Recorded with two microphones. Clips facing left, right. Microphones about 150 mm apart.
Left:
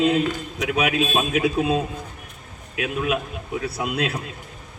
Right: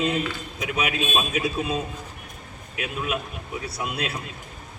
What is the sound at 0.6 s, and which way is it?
A man's voice, 65° left (ahead or behind).